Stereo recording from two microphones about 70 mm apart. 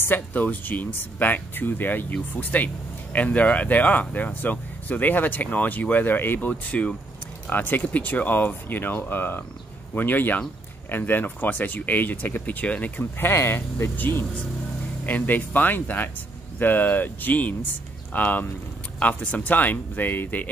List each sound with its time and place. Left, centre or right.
0.0 s speech: left